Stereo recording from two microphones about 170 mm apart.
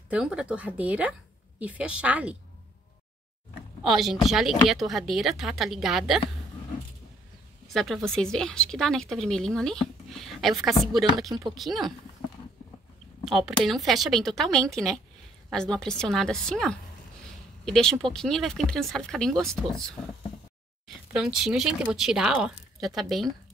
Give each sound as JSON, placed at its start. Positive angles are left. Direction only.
{"t": 0.1, "sound": "speech", "side_deg": -5}
{"t": 3.8, "sound": "a woman's voice", "side_deg": 0}
{"t": 7.6, "sound": "a woman's voice", "side_deg": 0}
{"t": 11.2, "sound": "speech", "side_deg": -20}
{"t": 11.5, "sound": "a woman's voice", "side_deg": 0}
{"t": 13.3, "sound": "a woman's voice", "side_deg": 0}